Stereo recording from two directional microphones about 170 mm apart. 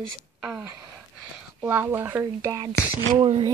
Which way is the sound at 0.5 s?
5° right (ahead or behind).